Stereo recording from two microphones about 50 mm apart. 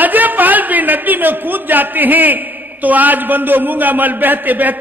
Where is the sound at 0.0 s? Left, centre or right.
Right.